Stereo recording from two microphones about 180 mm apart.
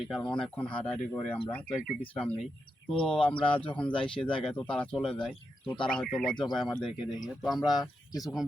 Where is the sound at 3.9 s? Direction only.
30° left (ahead or behind).